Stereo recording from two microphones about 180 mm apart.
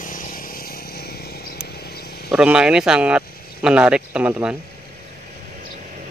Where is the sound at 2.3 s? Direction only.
5° right (ahead or behind).